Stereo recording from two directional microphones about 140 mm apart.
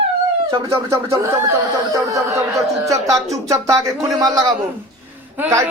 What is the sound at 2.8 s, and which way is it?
Speech, 20° right (ahead or behind).